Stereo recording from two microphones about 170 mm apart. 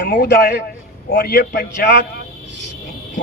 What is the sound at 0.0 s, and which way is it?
A man's voice, 70° left (ahead or behind).